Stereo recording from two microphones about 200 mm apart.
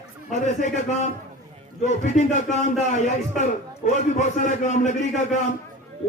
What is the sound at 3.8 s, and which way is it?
A man's voice, 40° left (ahead or behind).